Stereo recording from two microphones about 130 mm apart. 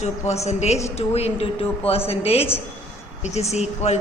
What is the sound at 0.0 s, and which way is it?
A man's voice, 55° left (ahead or behind).